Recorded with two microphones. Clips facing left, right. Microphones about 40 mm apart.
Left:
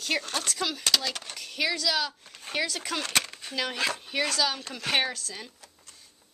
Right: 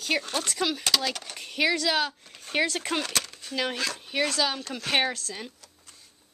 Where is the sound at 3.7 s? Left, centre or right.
Centre.